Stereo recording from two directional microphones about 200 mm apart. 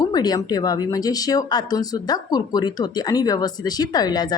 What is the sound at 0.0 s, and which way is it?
Speech, 20° left (ahead or behind).